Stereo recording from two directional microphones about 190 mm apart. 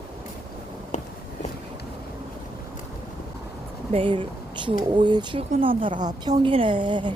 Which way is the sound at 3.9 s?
25° right (ahead or behind).